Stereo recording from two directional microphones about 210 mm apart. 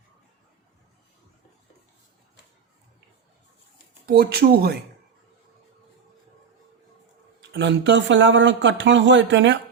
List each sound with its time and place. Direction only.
4.0 s speech: 50° right (ahead or behind)
7.5 s speech: 60° right (ahead or behind)